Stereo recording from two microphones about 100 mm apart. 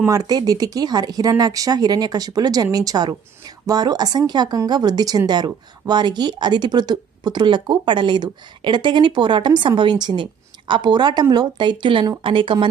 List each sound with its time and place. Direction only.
0.1 s a woman's voice: 45° right (ahead or behind)